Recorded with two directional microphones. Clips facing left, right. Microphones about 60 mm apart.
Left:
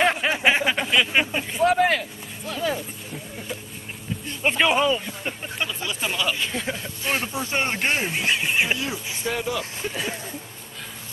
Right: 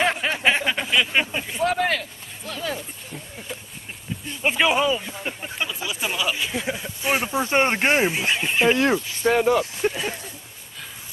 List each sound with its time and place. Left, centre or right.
0.0 s a sound: centre
4.3 s speech: centre
7.3 s speech: right
8.0 s speech: centre
8.7 s speech: right
9.2 s speech: right